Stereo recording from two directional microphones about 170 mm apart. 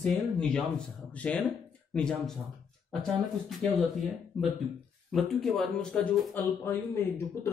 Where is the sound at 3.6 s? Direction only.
5° left (ahead or behind).